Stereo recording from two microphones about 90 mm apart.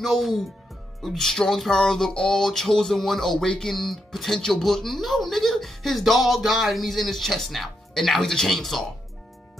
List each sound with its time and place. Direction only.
0.0 s speech: centre (ahead or behind)